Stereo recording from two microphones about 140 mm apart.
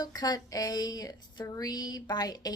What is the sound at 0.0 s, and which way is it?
Speech, 25° left (ahead or behind).